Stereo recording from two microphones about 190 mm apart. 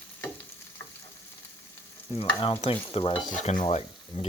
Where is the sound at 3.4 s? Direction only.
35° left (ahead or behind).